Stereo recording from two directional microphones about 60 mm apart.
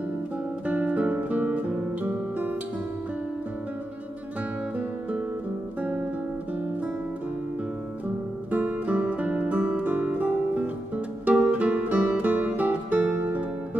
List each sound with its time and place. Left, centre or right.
0.7 s guitar: right
1.1 s music: right
5.8 s music: right
8.5 s music: right